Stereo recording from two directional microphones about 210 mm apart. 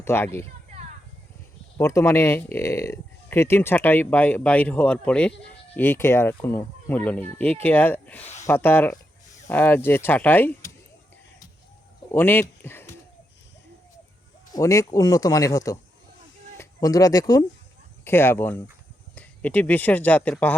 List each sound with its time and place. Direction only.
0.0 s speech: 10° left (ahead or behind)
1.8 s speech: 15° left (ahead or behind)
12.1 s speech: 10° left (ahead or behind)
14.5 s speech: 15° left (ahead or behind)